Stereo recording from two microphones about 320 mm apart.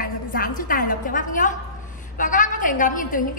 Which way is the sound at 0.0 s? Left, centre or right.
Left.